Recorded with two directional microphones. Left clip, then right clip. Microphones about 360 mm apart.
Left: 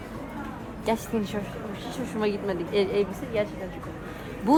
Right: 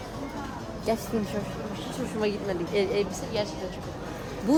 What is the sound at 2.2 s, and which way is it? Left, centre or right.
Speech, centre.